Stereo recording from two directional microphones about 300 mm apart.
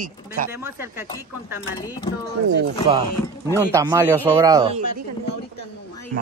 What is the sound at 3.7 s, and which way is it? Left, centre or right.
Speech, centre.